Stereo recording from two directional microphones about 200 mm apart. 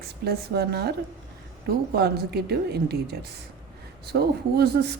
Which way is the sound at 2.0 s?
55° right (ahead or behind).